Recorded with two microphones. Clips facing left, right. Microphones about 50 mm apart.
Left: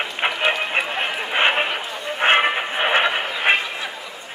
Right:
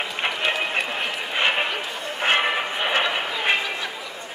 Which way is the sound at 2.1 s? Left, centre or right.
Left.